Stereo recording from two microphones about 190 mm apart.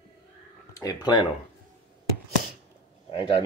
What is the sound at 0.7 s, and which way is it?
Speech, 20° left (ahead or behind).